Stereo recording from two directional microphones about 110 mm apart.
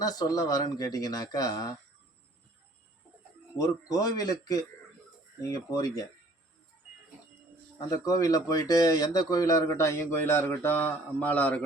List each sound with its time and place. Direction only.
0.0 s speech: 35° left (ahead or behind)
3.6 s speech: 35° left (ahead or behind)
7.8 s speech: 35° left (ahead or behind); by 11.6 s 15° left (ahead or behind)